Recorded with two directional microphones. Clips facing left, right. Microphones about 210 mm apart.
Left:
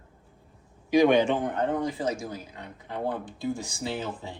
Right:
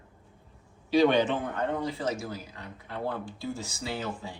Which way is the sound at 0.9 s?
15° left (ahead or behind).